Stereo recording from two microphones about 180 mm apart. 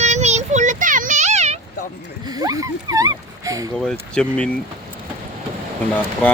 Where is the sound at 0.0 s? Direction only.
40° right (ahead or behind).